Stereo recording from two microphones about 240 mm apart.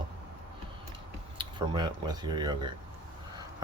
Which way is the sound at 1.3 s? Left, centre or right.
Centre.